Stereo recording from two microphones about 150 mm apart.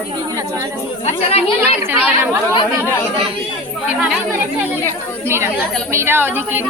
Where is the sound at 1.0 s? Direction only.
45° left (ahead or behind).